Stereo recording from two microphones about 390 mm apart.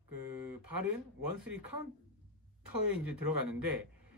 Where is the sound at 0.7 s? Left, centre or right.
Right.